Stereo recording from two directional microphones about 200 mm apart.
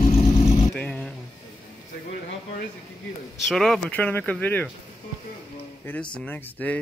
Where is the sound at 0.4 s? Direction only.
30° left (ahead or behind).